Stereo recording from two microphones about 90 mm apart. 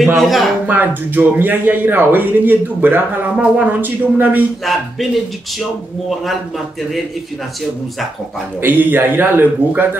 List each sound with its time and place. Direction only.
0.0 s speech: centre (ahead or behind)
0.7 s speech: 20° right (ahead or behind)
4.7 s speech: centre (ahead or behind)
8.5 s speech: 20° right (ahead or behind)